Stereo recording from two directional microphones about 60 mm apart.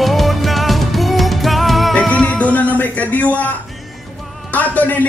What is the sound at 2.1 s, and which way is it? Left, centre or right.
Music, left.